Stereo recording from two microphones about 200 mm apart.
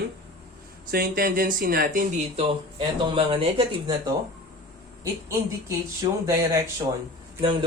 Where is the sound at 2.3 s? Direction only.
25° right (ahead or behind).